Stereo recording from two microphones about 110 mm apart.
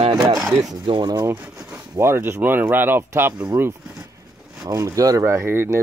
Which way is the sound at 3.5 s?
15° right (ahead or behind).